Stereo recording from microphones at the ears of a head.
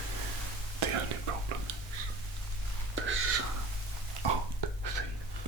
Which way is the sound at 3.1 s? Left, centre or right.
Right.